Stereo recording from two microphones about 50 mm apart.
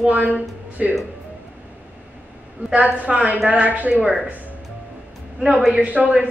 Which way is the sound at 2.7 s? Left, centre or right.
Right.